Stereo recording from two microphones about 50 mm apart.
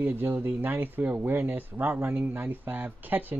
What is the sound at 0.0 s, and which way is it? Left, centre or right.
Speech, right.